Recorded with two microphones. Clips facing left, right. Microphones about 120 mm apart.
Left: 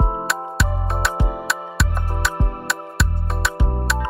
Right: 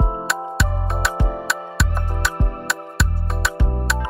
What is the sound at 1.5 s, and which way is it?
Music, centre (ahead or behind).